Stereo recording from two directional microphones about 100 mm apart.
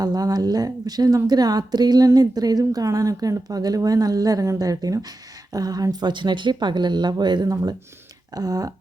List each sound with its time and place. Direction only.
0.0 s a woman's voice: 40° right (ahead or behind)